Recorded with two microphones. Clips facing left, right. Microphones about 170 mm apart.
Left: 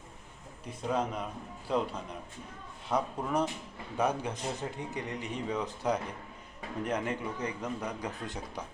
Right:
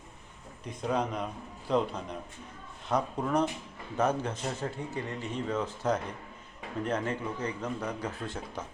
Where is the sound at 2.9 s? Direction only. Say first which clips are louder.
Right 2 dB; 10° left (ahead or behind).